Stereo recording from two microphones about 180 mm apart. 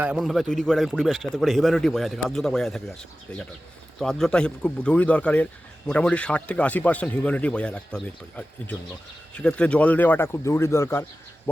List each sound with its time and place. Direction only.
0.0 s a man's voice: 5° right (ahead or behind); by 11.0 s 15° left (ahead or behind)